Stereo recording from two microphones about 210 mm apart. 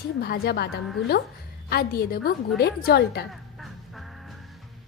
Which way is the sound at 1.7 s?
45° left (ahead or behind).